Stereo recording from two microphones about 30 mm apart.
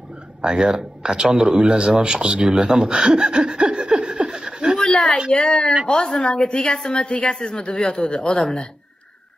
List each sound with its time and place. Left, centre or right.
0.4 s speech: right
2.9 s laughter: right
4.0 s a sound: right
4.3 s chuckle: right
4.7 s a sound: left
5.3 s a woman's voice: left
7.4 s speech: left